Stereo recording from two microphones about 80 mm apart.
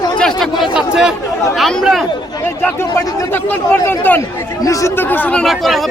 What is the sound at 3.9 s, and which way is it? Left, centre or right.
Speech, left.